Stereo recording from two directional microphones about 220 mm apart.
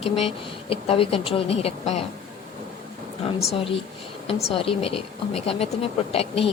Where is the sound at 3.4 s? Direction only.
30° left (ahead or behind).